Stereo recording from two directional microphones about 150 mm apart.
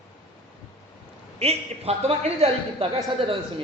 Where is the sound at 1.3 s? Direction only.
45° right (ahead or behind).